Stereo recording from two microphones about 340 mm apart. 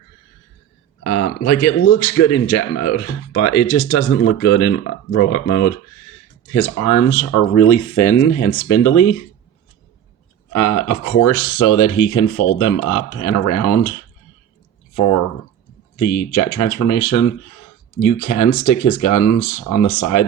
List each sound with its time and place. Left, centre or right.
1.0 s speech: left
10.5 s speech: left
14.9 s speech: left